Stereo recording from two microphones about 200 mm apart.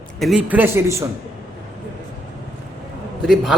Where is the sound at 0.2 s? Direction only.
Centre (ahead or behind).